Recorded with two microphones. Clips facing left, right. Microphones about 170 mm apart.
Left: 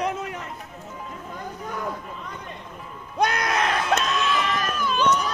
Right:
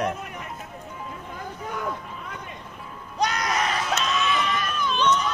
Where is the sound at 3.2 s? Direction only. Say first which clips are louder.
Left 2 dB; 55° left (ahead or behind).